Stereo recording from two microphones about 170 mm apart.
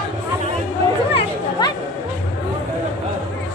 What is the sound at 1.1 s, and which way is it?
Chatter, 30° left (ahead or behind).